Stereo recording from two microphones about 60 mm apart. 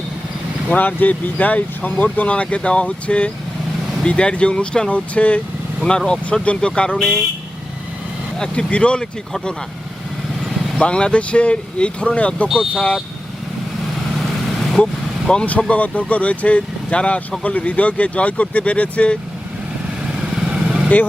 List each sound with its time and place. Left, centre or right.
0.7 s speech: left
6.4 s speech: centre
8.4 s speech: centre
10.8 s speech: centre
15.3 s speech: centre
20.5 s vehicle: centre